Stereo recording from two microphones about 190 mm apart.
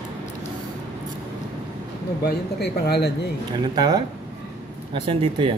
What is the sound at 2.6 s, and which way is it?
Speech, 60° left (ahead or behind).